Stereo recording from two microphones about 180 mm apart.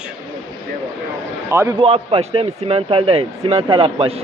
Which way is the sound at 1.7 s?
30° right (ahead or behind).